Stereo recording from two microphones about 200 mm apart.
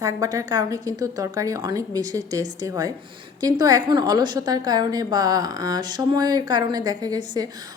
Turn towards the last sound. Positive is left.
turn(degrees=-20)  # may be behind; listen again after turning